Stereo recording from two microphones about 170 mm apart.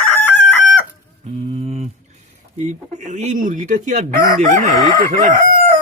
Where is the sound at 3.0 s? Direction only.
45° right (ahead or behind).